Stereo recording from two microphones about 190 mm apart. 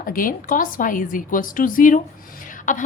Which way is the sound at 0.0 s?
45° left (ahead or behind).